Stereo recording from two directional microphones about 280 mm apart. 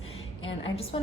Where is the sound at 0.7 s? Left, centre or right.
Centre.